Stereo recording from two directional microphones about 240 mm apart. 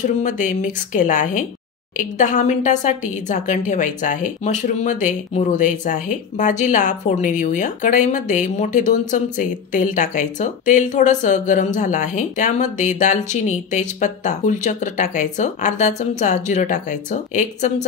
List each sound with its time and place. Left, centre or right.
0.0 s a woman's voice: left